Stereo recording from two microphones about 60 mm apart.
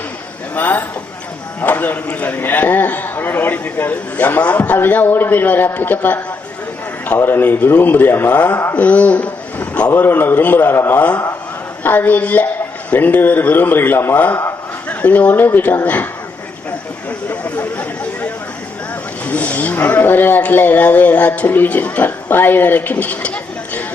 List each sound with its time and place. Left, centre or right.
0.5 s a man's voice: left
14.8 s speech: left
17.4 s chatter: left
19.2 s speech: left